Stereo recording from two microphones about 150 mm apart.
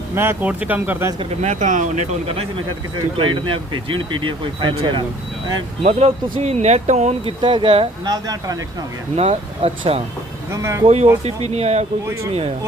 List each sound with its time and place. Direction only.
0.1 s speech: 15° right (ahead or behind)
1.2 s speech: 50° right (ahead or behind); by 7.9 s 35° right (ahead or behind)
8.0 s speech: 25° right (ahead or behind)
9.1 s speech: 45° right (ahead or behind)
10.5 s speech: 20° right (ahead or behind)
10.8 s speech: 45° right (ahead or behind)